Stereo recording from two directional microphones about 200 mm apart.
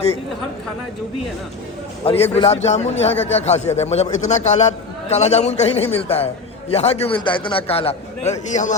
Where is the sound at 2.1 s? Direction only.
30° left (ahead or behind).